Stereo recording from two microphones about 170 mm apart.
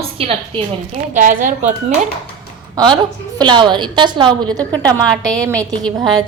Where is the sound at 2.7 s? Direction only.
25° right (ahead or behind).